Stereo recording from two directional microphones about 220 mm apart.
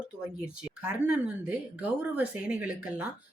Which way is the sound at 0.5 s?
5° right (ahead or behind).